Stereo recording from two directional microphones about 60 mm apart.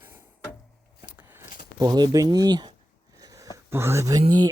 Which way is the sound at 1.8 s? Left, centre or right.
Right.